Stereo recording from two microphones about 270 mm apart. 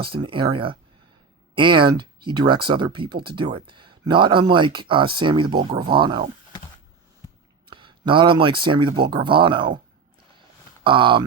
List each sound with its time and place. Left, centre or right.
0.0 s speech: centre
7.7 s speech: centre
10.8 s speech: centre